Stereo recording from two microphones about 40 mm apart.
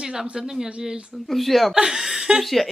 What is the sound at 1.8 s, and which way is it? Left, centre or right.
Speech, centre.